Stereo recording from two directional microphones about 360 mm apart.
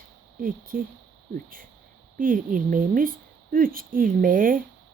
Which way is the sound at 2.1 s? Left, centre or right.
Right.